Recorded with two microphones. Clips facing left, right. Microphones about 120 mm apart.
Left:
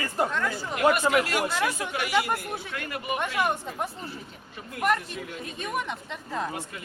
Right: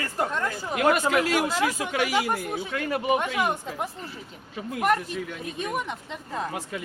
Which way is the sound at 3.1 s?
15° right (ahead or behind).